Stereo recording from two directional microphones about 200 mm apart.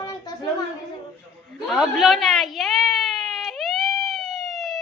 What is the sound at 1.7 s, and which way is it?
Whimper, centre (ahead or behind).